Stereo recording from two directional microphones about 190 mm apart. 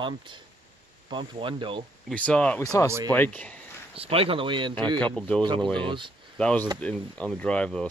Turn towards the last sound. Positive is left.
turn(degrees=5)  # may be behind; listen again after turning